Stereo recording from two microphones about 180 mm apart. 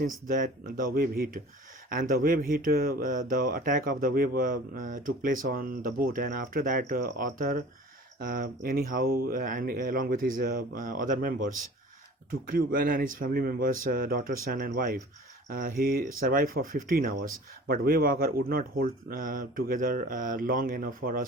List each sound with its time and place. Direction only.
0.0 s speech: 50° right (ahead or behind)